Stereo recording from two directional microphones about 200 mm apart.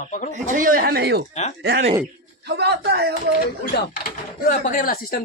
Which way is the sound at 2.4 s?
55° right (ahead or behind).